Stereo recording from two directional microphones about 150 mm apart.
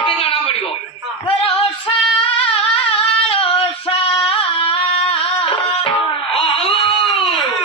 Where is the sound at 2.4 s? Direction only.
35° left (ahead or behind).